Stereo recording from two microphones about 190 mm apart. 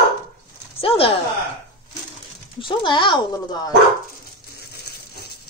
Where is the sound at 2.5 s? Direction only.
25° left (ahead or behind).